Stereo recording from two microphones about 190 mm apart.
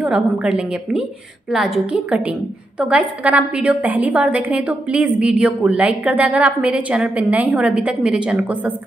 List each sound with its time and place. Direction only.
0.0 s a woman's voice: 5° right (ahead or behind)